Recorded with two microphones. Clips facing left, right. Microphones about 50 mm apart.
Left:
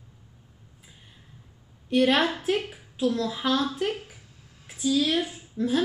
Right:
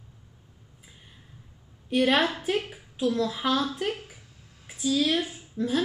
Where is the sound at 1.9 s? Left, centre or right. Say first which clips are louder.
Left 1 dB; centre.